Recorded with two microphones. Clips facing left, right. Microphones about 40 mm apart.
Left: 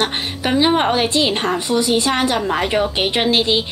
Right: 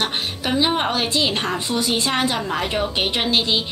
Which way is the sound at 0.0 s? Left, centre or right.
Centre.